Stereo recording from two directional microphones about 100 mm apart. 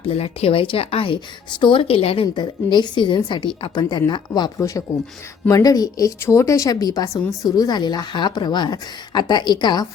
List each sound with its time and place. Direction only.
0.1 s a woman's voice: 80° left
2.2 s a woman's voice: 50° left (ahead or behind)
4.9 s a woman's voice: 25° left (ahead or behind); by 9.8 s 50° left (ahead or behind)